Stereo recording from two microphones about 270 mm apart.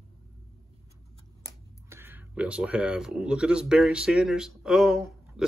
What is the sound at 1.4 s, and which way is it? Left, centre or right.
Speech, centre.